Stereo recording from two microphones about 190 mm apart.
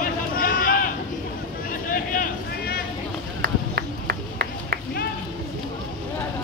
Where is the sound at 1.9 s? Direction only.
45° left (ahead or behind).